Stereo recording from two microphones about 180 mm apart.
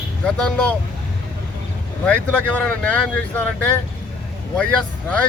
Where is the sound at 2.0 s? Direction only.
10° left (ahead or behind).